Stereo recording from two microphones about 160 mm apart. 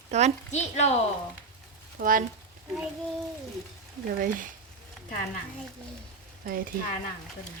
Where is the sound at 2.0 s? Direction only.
60° right (ahead or behind).